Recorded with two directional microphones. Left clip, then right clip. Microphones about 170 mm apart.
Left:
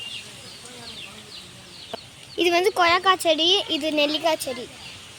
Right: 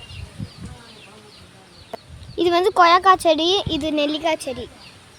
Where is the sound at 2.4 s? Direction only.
40° right (ahead or behind).